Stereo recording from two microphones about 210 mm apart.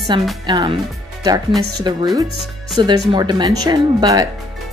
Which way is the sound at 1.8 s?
20° right (ahead or behind).